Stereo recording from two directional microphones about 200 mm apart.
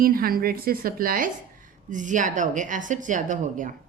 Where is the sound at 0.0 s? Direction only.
45° right (ahead or behind).